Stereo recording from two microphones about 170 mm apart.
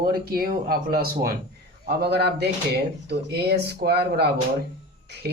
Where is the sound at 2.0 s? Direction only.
75° right (ahead or behind).